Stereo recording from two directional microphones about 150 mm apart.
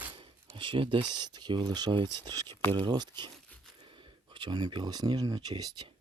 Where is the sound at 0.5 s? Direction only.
35° right (ahead or behind).